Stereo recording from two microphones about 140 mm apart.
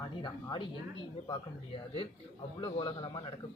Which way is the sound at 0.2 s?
35° left (ahead or behind).